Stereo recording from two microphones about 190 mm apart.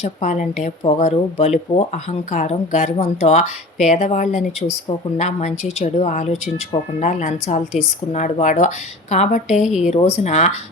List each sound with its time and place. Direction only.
0.0 s speech: 40° left (ahead or behind)
9.6 s speech: centre (ahead or behind)
9.9 s speech: 35° left (ahead or behind)